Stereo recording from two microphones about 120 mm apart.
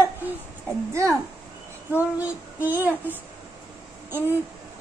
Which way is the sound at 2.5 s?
15° right (ahead or behind).